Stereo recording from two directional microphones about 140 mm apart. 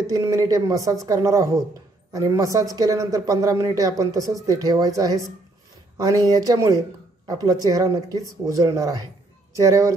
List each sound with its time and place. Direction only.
0.0 s speech: 25° right (ahead or behind)